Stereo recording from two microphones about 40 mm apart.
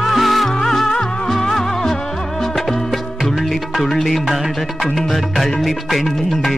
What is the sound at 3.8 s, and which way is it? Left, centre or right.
Music, centre.